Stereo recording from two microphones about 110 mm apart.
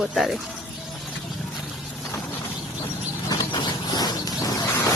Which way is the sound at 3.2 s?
40° left (ahead or behind).